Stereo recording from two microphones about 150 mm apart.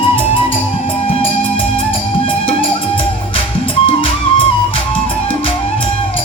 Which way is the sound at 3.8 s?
40° left (ahead or behind).